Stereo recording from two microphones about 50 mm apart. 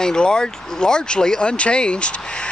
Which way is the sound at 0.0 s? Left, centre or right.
Centre.